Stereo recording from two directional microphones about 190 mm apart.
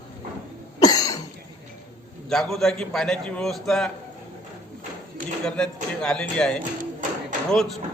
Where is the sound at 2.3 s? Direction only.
Centre (ahead or behind).